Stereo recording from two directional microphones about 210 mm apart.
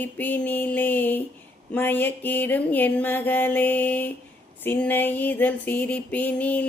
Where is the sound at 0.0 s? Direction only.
10° left (ahead or behind).